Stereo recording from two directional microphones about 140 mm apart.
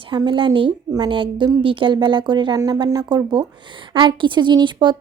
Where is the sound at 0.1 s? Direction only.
35° right (ahead or behind).